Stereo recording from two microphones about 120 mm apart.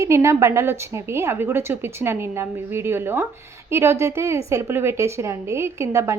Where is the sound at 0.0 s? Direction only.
25° right (ahead or behind).